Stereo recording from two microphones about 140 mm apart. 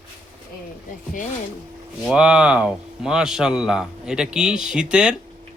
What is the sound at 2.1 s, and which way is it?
A man's voice, 5° right (ahead or behind).